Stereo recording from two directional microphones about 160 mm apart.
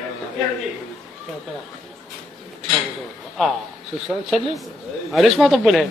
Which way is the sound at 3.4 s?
Centre (ahead or behind).